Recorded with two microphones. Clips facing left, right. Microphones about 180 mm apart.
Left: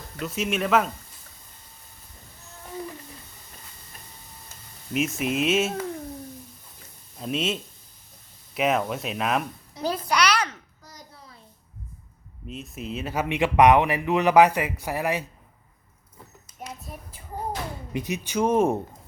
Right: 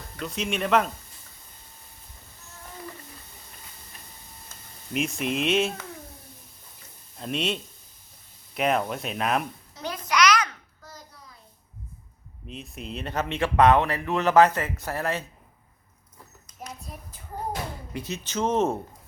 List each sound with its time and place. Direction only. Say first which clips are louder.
0.2 s speech: left 2 dB; 5° left (ahead or behind)
4.9 s speech: left 2 dB; 5° left (ahead or behind)
7.2 s speech: left 1 dB; centre (ahead or behind)
9.8 s a sound: even; 30° left (ahead or behind)
12.5 s a man's voice: left 3 dB; centre (ahead or behind)
16.5 s a sound: left 2 dB; 5° left (ahead or behind)
17.9 s a man's voice: left 5 dB; 15° left (ahead or behind)